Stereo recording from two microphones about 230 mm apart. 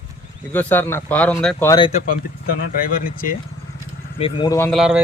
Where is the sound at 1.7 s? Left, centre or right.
Left.